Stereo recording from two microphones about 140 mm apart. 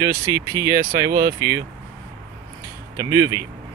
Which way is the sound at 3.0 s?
25° right (ahead or behind).